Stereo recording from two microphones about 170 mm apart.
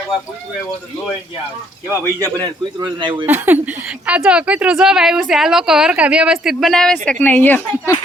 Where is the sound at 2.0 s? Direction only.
20° right (ahead or behind).